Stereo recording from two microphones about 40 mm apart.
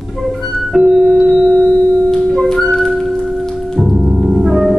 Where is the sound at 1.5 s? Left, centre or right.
Left.